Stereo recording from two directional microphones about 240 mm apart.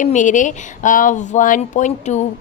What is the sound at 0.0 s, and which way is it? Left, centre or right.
Speech, left.